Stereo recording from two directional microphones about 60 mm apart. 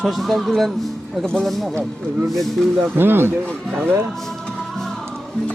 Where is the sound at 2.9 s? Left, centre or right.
Right.